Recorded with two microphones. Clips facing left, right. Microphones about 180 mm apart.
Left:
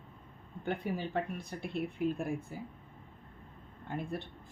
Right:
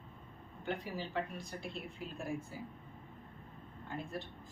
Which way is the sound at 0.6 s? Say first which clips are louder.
Left 5 dB; 55° left (ahead or behind).